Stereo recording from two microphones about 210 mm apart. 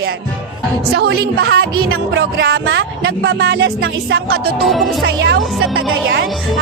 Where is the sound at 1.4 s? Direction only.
50° right (ahead or behind).